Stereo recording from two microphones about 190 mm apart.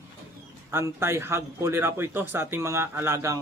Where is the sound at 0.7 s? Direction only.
15° right (ahead or behind).